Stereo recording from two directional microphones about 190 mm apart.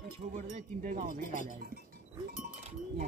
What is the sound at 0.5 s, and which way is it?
Speech, 40° right (ahead or behind).